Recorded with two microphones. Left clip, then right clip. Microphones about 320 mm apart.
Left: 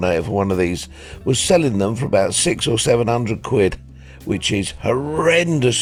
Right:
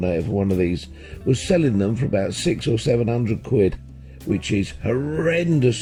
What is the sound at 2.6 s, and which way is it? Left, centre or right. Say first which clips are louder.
Speech: left 4 dB; centre.